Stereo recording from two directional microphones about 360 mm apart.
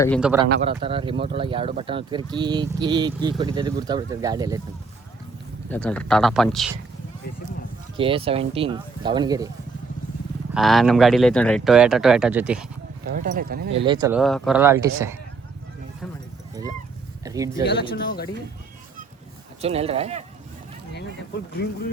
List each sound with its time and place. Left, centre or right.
0.0 s speech: centre
0.4 s speech: right
0.8 s speech: centre
5.6 s speech: centre
7.9 s speech: centre
10.5 s speech: centre
13.1 s speech: right
13.8 s speech: centre
14.2 s speech: centre
17.2 s speech: centre
17.7 s speech: left
19.6 s speech: centre